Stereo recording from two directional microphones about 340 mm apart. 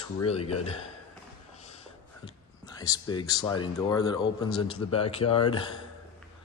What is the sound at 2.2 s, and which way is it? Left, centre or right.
Speech, centre.